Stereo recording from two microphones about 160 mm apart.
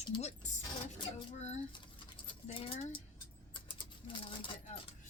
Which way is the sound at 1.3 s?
45° left (ahead or behind).